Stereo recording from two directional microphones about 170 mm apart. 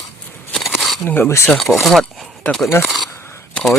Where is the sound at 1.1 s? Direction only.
15° left (ahead or behind).